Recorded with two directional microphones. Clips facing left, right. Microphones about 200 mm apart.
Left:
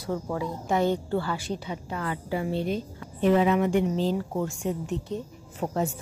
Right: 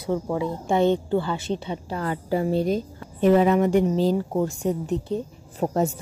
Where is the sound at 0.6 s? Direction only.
25° right (ahead or behind).